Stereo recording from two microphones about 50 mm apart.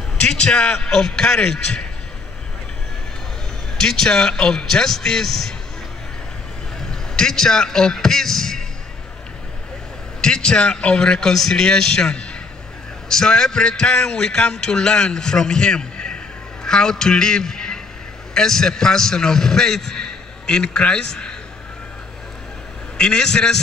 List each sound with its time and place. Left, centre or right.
0.2 s a man's voice: centre
0.7 s a man's voice: centre
3.7 s a man's voice: centre
6.9 s a man's voice: centre
10.2 s a man's voice: centre
22.9 s a man's voice: centre